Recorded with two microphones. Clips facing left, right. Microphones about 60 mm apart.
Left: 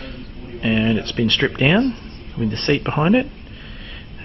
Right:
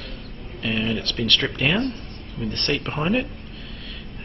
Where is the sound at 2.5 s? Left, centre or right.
Centre.